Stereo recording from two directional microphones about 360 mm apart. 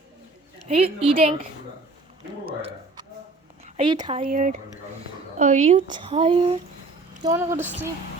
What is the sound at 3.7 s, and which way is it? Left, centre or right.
Speech, centre.